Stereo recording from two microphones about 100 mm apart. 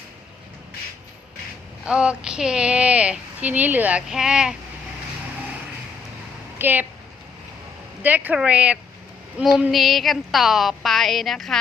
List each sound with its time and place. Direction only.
1.8 s speech: 10° right (ahead or behind)
6.6 s speech: 20° right (ahead or behind)
8.0 s speech: 15° right (ahead or behind)
9.7 s a woman's voice: centre (ahead or behind)